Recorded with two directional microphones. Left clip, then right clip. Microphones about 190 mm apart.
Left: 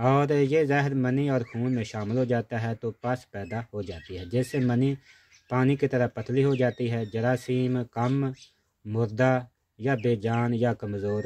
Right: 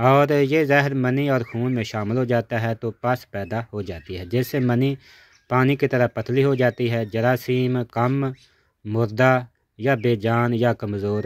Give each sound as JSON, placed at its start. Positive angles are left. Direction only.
{"t": 0.0, "sound": "speech", "side_deg": -20}